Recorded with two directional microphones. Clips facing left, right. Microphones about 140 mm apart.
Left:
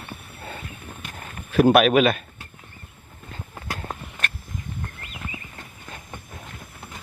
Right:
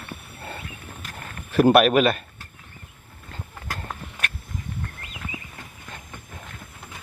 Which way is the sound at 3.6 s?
15° left (ahead or behind).